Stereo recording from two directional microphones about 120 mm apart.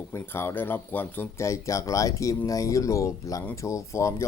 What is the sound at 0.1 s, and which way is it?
Speech, 20° left (ahead or behind).